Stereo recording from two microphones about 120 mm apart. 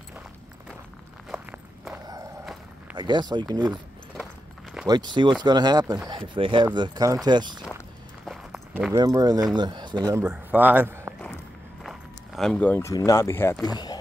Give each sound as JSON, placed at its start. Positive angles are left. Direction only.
{"t": 1.3, "sound": "walk", "side_deg": -10}
{"t": 3.0, "sound": "speech", "side_deg": -40}
{"t": 3.6, "sound": "keys jangling", "side_deg": -5}
{"t": 4.8, "sound": "speech", "side_deg": -35}
{"t": 8.9, "sound": "speech", "side_deg": -30}
{"t": 10.1, "sound": "a man's voice", "side_deg": -15}
{"t": 11.8, "sound": "a sound", "side_deg": 0}
{"t": 12.8, "sound": "speech", "side_deg": 25}
{"t": 13.7, "sound": "speech", "side_deg": 35}